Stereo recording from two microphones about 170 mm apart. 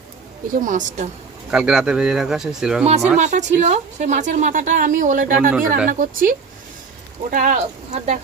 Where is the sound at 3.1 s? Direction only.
45° right (ahead or behind).